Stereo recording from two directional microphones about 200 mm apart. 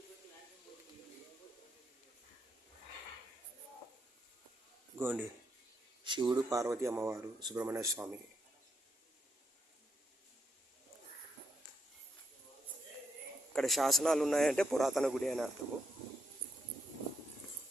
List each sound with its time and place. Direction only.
4.9 s speech: 10° right (ahead or behind)
6.1 s speech: 20° right (ahead or behind)
13.5 s a man's voice: centre (ahead or behind)